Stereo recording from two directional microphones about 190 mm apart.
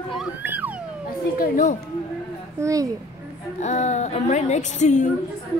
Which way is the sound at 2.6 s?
15° right (ahead or behind).